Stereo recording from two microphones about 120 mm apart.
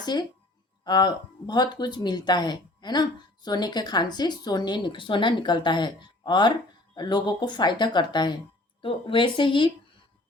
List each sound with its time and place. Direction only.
0.0 s speech: 35° left (ahead or behind)